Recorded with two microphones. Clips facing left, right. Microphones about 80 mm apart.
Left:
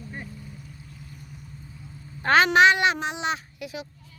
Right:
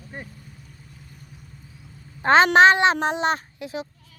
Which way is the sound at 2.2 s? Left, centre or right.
Right.